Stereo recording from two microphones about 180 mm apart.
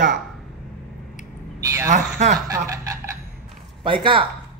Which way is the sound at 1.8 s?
45° right (ahead or behind).